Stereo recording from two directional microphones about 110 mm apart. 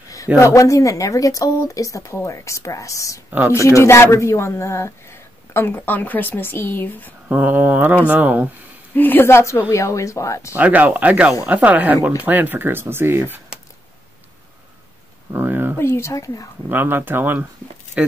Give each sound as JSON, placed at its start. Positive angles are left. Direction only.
{"t": 0.4, "sound": "speech", "side_deg": 25}
{"t": 3.3, "sound": "speech", "side_deg": -20}
{"t": 3.6, "sound": "speech", "side_deg": 25}
{"t": 7.2, "sound": "speech", "side_deg": -15}
{"t": 8.9, "sound": "speech", "side_deg": 20}
{"t": 10.5, "sound": "speech", "side_deg": -15}
{"t": 15.3, "sound": "speech", "side_deg": -20}
{"t": 15.8, "sound": "speech", "side_deg": 25}
{"t": 16.6, "sound": "speech", "side_deg": -20}